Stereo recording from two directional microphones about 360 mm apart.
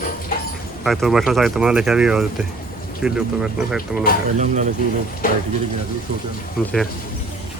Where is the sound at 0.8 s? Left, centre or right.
Centre.